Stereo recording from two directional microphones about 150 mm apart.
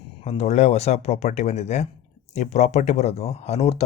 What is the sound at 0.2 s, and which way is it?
Speech, 45° left (ahead or behind).